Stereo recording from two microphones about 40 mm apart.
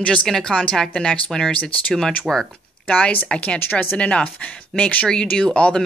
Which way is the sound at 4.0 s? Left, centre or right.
Left.